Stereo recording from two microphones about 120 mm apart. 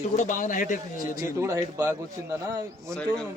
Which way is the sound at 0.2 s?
90° left.